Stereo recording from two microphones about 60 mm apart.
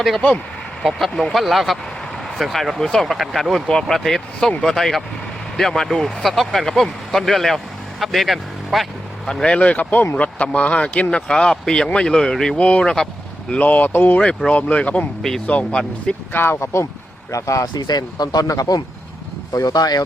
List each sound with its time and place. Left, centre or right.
0.8 s speech: centre
3.7 s speech: centre
9.2 s speech: centre
13.5 s speech: left
14.2 s speech: centre
16.3 s speech: left
17.3 s speech: left
18.3 s speech: left